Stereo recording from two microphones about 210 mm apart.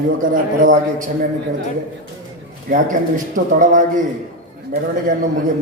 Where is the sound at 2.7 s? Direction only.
40° right (ahead or behind).